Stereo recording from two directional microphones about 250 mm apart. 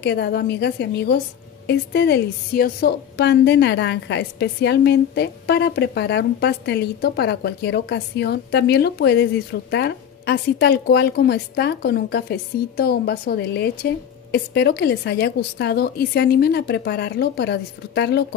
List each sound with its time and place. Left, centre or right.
0.0 s a woman's voice: left